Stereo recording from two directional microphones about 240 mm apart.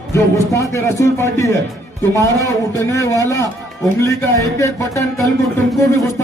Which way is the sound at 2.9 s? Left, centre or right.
Centre.